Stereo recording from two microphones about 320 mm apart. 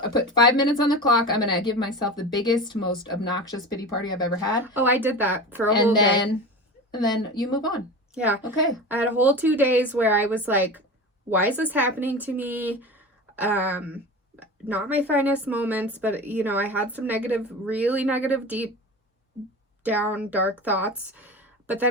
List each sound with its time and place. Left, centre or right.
0.3 s speech: centre
4.6 s a woman's voice: centre
6.9 s speech: centre
8.1 s a woman's voice: centre
19.8 s speech: centre